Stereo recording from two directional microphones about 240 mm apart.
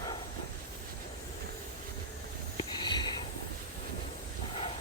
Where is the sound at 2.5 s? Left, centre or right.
Centre.